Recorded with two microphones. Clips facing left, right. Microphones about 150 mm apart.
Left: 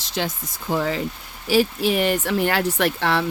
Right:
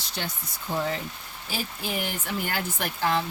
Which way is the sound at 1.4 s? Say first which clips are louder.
Left 14 dB; 80° left.